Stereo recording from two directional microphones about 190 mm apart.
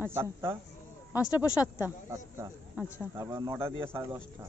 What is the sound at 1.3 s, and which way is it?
Speech, 20° left (ahead or behind).